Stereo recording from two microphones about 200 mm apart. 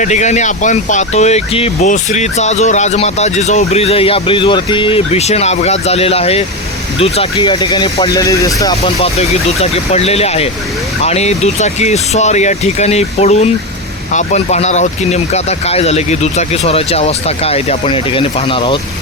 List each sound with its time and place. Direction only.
0.0 s speech: 35° left (ahead or behind); by 8.7 s 15° left (ahead or behind)
8.7 s speech: 30° left (ahead or behind)